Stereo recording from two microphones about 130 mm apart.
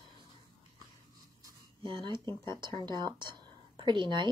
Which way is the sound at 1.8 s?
40° right (ahead or behind).